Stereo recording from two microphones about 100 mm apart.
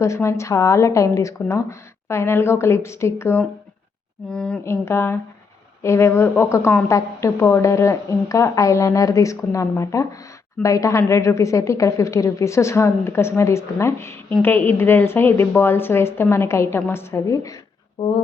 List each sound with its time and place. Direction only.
0.0 s a woman's voice: 30° left (ahead or behind)
4.3 s speech: 10° left (ahead or behind)
4.6 s a woman's voice: 25° left (ahead or behind)